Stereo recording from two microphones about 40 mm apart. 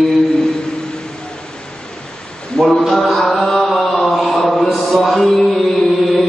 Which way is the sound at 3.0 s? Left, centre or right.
Centre.